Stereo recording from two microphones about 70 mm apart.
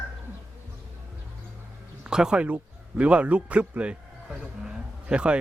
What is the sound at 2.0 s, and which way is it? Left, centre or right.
A man's voice, centre.